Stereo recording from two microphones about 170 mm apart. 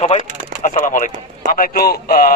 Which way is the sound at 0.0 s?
40° left (ahead or behind).